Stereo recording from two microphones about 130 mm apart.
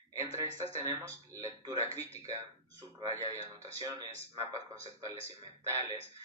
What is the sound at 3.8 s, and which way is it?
Speech, 25° right (ahead or behind).